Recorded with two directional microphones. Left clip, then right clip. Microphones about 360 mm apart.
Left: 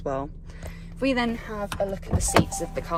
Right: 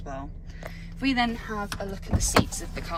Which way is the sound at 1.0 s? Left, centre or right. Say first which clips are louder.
Left 1 dB; centre.